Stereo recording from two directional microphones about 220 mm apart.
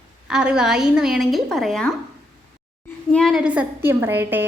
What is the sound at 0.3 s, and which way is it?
A woman's voice, 5° right (ahead or behind).